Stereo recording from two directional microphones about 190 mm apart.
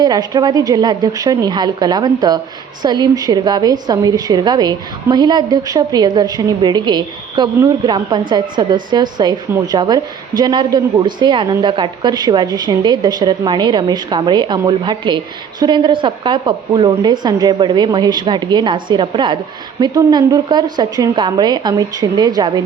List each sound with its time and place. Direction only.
0.0 s a woman's voice: 20° right (ahead or behind)